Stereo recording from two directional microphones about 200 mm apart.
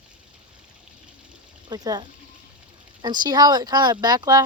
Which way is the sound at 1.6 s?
20° right (ahead or behind).